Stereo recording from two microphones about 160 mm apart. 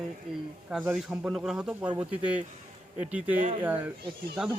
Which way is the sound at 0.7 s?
Centre (ahead or behind).